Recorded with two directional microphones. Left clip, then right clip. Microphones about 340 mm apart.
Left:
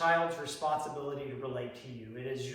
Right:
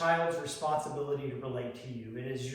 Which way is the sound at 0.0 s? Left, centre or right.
Centre.